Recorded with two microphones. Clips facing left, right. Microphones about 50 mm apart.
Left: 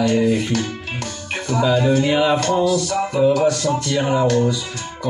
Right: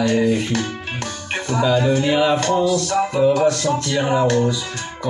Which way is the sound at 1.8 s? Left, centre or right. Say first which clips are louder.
Left 1 dB; right.